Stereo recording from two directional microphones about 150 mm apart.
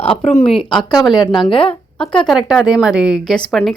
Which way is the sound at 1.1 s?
25° left (ahead or behind).